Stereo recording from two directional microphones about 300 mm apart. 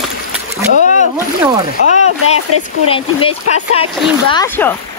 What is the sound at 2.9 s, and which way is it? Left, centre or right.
Speech, centre.